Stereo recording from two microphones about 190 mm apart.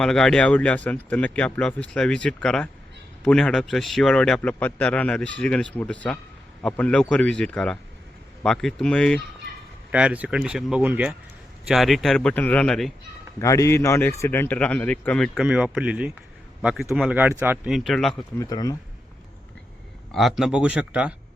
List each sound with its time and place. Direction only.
0.0 s a man's voice: 5° left (ahead or behind)
9.9 s a man's voice: 5° right (ahead or behind)
13.4 s a man's voice: 15° left (ahead or behind)
15.4 s a man's voice: 5° right (ahead or behind)
18.3 s speech: 20° left (ahead or behind)
20.1 s a man's voice: centre (ahead or behind)